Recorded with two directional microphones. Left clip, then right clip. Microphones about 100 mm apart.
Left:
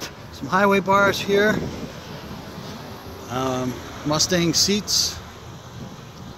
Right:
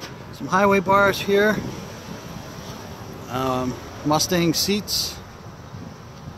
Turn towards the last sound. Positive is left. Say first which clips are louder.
# left 3 dB
turn(degrees=-15)  # may be behind; listen again after turning